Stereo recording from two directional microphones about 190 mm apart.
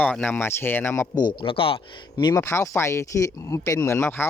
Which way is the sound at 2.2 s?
15° left (ahead or behind).